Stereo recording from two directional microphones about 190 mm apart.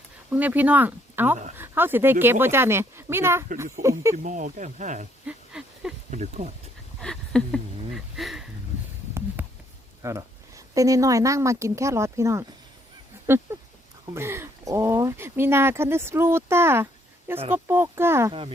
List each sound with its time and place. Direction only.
0.3 s speech: 10° right (ahead or behind)
4.1 s speech: 45° right (ahead or behind)
5.2 s a sound: 5° right (ahead or behind)
6.1 s speech: 40° right (ahead or behind)
7.0 s speech: 5° left (ahead or behind)
9.1 s a sound: 10° right (ahead or behind)
10.0 s speech: 15° right (ahead or behind)
13.2 s duck: 10° right (ahead or behind)
14.1 s speech: 15° right (ahead or behind)